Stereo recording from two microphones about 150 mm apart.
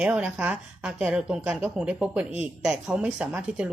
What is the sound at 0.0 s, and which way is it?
A woman's voice, 10° right (ahead or behind).